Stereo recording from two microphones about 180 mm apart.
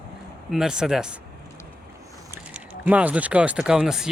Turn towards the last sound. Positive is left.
turn(degrees=-5)  # may be behind; listen again after turning